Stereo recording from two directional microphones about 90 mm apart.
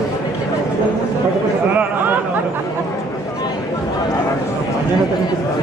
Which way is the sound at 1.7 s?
20° right (ahead or behind).